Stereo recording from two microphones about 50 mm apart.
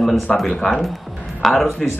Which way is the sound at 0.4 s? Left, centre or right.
Centre.